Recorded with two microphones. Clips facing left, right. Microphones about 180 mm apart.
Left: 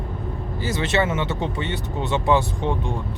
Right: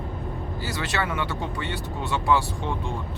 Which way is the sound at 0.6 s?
20° left (ahead or behind).